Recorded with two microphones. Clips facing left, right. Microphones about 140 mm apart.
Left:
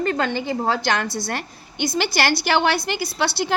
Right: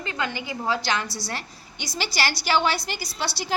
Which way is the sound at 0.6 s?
55° left (ahead or behind).